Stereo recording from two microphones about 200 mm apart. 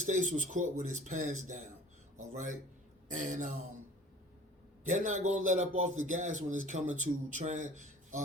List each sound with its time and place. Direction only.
0.0 s a man's voice: 35° right (ahead or behind)
2.1 s a sound: 40° right (ahead or behind)
3.1 s a man's voice: 40° right (ahead or behind)
4.8 s a man's voice: 40° right (ahead or behind)